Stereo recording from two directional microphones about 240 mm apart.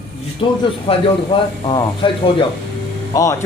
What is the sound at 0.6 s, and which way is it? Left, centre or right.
Speech, left.